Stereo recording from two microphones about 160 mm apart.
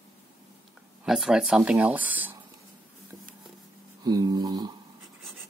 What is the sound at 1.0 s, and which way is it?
Speech, centre (ahead or behind).